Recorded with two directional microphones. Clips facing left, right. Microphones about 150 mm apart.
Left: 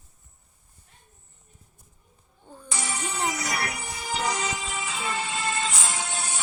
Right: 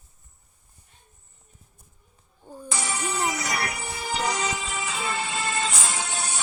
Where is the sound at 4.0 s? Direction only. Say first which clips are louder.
Right 1 dB; 70° right (ahead or behind).